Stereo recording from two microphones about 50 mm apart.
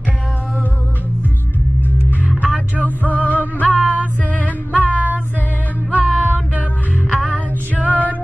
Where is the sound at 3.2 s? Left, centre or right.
Left.